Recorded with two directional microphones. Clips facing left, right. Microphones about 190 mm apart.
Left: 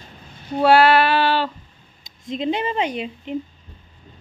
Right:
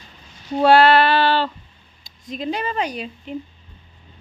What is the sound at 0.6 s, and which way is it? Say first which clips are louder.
Speech: right 1 dB; 10° left (ahead or behind).